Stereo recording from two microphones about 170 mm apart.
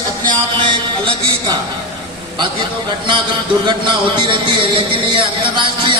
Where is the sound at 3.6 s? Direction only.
25° right (ahead or behind).